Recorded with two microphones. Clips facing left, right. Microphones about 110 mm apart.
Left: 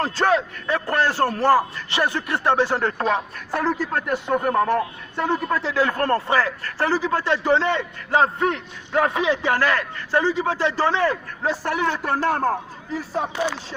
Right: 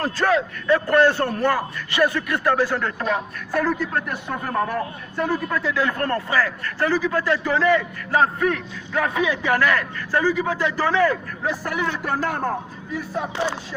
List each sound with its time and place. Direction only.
0.0 s a man's voice: 30° left (ahead or behind)
1.4 s a man's voice: 30° left (ahead or behind)
13.3 s a sound: 30° right (ahead or behind)